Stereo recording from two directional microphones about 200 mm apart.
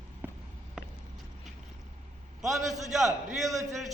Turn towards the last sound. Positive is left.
turn(degrees=0)  # may be behind; listen again after turning